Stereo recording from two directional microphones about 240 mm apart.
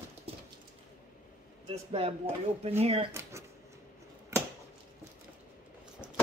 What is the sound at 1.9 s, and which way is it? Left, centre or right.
Speech, right.